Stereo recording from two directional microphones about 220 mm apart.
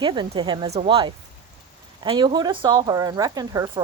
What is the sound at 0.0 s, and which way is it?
Speech, 20° right (ahead or behind).